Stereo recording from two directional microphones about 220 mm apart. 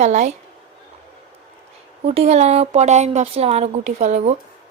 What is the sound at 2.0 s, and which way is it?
Speech, 30° right (ahead or behind).